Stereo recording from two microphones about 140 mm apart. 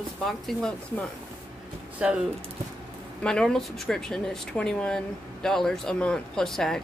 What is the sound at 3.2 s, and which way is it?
Speech, 5° left (ahead or behind).